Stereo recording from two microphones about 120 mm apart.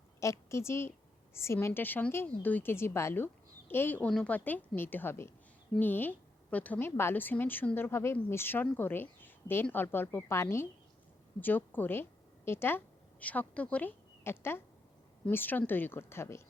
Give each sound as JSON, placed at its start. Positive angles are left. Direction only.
{"t": 0.2, "sound": "a woman's voice", "side_deg": 25}